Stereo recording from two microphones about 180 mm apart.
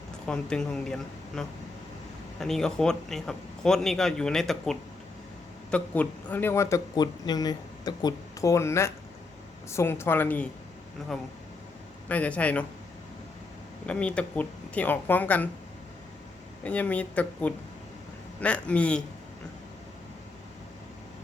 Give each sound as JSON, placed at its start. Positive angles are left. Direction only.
{"t": 0.3, "sound": "a man's voice", "side_deg": 5}
{"t": 12.0, "sound": "speech", "side_deg": 5}
{"t": 13.8, "sound": "speech", "side_deg": 5}
{"t": 16.6, "sound": "speech", "side_deg": 5}